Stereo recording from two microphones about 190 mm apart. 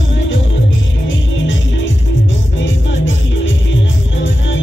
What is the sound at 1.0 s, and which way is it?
Music, 80° left.